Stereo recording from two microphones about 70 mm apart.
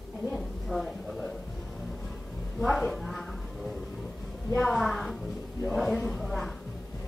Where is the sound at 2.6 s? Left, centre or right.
Centre.